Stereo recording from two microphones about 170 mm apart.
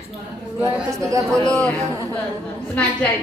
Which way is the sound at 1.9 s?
20° right (ahead or behind).